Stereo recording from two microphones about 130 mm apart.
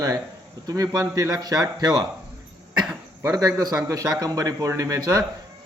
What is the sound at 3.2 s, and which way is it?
A man's voice, 25° right (ahead or behind).